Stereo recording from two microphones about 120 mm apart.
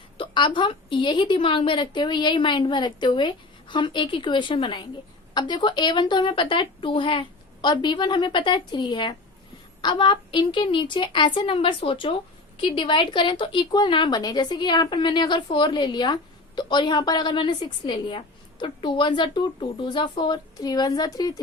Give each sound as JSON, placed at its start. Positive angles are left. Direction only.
{"t": 0.2, "sound": "a woman's voice", "side_deg": 40}